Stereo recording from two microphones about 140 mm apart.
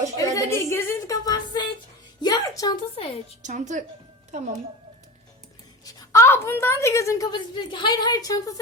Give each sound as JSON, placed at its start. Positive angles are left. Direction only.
{"t": 0.2, "sound": "a woman's voice", "side_deg": 25}
{"t": 2.2, "sound": "a sound", "side_deg": 25}
{"t": 2.9, "sound": "a woman's voice", "side_deg": 40}
{"t": 3.4, "sound": "a woman's voice", "side_deg": -60}
{"t": 5.8, "sound": "a woman's voice", "side_deg": 25}